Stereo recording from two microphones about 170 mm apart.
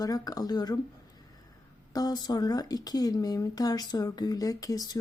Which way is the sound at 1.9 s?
20° left (ahead or behind).